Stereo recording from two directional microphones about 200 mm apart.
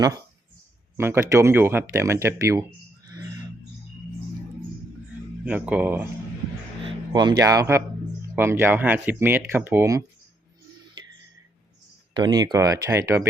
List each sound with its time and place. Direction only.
0.9 s speech: 10° right (ahead or behind)
5.5 s speech: 5° right (ahead or behind)
6.8 s a man's voice: 20° right (ahead or behind)
12.1 s speech: 20° right (ahead or behind)